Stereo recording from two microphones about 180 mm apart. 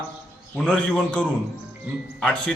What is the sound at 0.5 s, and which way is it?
A man's voice, 5° left (ahead or behind).